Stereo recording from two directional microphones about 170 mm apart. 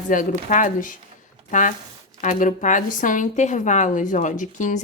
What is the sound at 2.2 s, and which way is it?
A woman's voice, 45° left (ahead or behind).